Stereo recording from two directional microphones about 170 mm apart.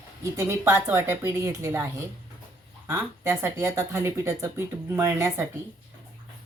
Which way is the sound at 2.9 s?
15° right (ahead or behind).